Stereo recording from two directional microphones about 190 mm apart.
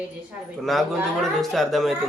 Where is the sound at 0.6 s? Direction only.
Centre (ahead or behind).